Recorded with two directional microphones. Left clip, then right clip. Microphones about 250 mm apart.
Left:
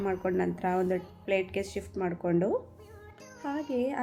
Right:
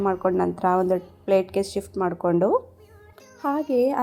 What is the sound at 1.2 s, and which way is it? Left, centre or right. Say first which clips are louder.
Speech: right 9 dB; right.